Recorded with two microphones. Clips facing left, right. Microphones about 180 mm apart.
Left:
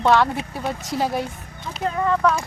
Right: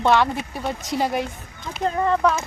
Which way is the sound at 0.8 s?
15° right (ahead or behind).